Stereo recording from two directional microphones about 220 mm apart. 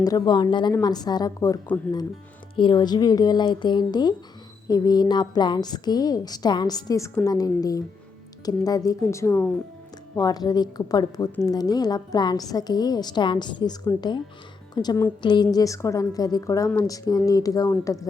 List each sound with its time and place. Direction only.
0.0 s a woman's voice: 20° left (ahead or behind)